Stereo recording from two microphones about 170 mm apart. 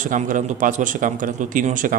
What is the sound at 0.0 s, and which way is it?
Speech, 50° right (ahead or behind).